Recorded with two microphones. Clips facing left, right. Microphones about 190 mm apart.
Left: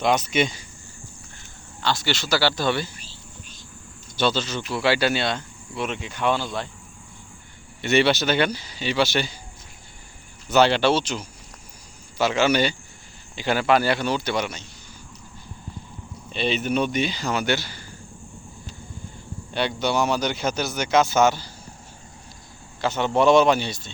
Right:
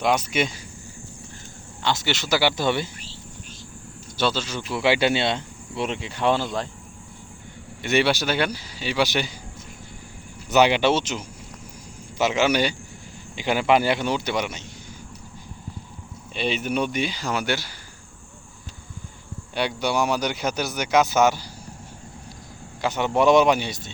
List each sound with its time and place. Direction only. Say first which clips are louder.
0.0 s speech: left 1 dB; 10° right (ahead or behind)
1.8 s speech: even; 20° right (ahead or behind)
4.2 s speech: left 1 dB; 5° right (ahead or behind); by 6.7 s 40° right (ahead or behind)
7.8 s speech: left 2 dB; 10° right (ahead or behind)
10.5 s speech: even; 15° right (ahead or behind)
16.3 s speech: left 1 dB; 10° right (ahead or behind)
19.5 s speech: left 1 dB; 10° right (ahead or behind)
22.8 s speech: even; 15° right (ahead or behind)